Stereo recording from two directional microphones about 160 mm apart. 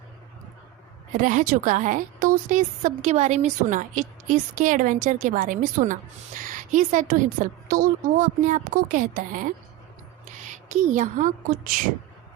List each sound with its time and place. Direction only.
1.1 s a woman's voice: 55° right (ahead or behind)